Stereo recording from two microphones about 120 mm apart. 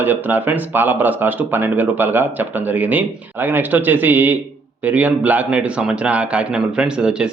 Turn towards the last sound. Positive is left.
turn(degrees=-5)  # may be behind; listen again after turning